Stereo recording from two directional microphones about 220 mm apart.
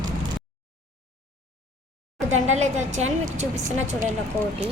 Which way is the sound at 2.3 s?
30° right (ahead or behind).